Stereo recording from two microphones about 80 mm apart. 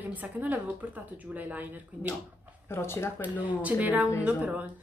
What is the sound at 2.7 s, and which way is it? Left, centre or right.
Speech, left.